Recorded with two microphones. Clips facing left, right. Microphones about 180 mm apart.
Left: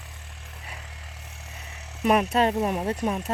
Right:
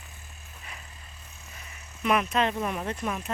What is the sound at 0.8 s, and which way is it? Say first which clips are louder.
Vehicle: left 5 dB; 85° left.